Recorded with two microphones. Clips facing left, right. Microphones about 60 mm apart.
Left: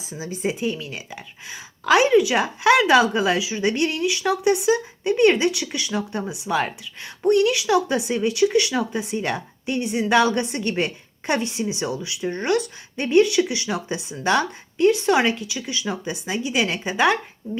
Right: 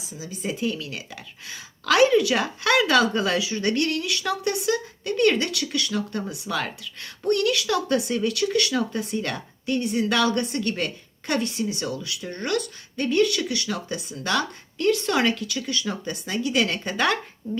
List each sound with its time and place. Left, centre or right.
0.1 s speech: left
0.5 s a woman's voice: centre